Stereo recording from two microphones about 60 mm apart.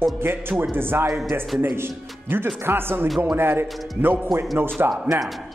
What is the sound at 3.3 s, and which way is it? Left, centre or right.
Speech, right.